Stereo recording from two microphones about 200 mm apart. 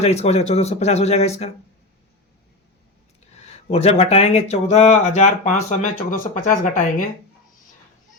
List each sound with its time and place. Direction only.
0.0 s speech: 35° left (ahead or behind)
3.3 s speech: 35° left (ahead or behind)